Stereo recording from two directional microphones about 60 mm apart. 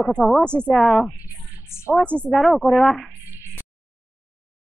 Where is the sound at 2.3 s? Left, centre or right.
Centre.